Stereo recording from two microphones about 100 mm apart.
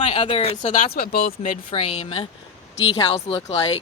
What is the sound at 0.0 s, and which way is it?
Speech, 75° left (ahead or behind).